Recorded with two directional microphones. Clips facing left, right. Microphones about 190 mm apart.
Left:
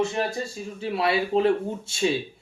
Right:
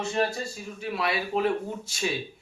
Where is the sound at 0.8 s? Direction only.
30° left (ahead or behind).